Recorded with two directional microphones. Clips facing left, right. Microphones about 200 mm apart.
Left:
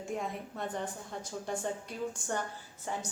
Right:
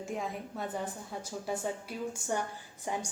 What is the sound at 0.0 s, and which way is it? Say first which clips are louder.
A woman's voice: even; centre (ahead or behind).